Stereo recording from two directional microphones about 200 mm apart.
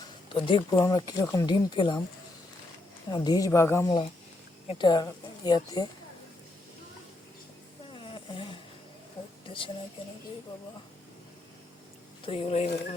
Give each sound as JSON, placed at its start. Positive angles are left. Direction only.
{"t": 0.3, "sound": "speech", "side_deg": 25}
{"t": 3.1, "sound": "a woman's voice", "side_deg": 20}
{"t": 3.8, "sound": "speech", "side_deg": 25}
{"t": 7.9, "sound": "a sound", "side_deg": 25}
{"t": 12.2, "sound": "speech", "side_deg": 25}